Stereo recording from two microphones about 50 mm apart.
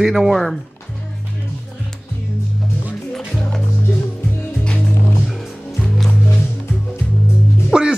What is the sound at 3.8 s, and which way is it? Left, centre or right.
Music, left.